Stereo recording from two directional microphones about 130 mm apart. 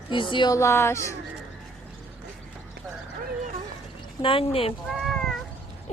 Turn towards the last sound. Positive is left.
turn(degrees=0)  # may be behind; listen again after turning